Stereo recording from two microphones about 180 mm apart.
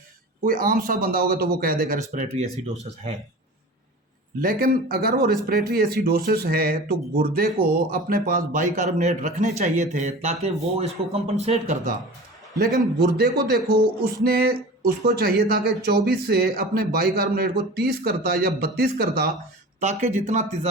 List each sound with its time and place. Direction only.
0.4 s speech: 50° right (ahead or behind)
4.4 s speech: 55° right (ahead or behind); by 11.9 s 40° right (ahead or behind)
12.7 s speech: 60° right (ahead or behind)
19.8 s speech: 40° right (ahead or behind)